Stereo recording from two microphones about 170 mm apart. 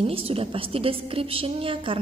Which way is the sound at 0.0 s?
35° right (ahead or behind).